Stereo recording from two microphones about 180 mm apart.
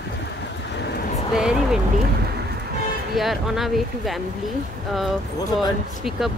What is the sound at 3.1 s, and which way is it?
Speech, centre (ahead or behind).